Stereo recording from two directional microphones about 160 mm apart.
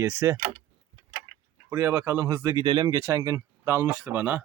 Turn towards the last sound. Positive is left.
turn(degrees=-10)  # may be behind; listen again after turning